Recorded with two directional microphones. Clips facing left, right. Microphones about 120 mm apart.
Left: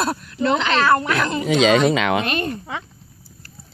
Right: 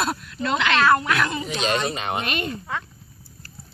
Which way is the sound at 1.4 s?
85° left.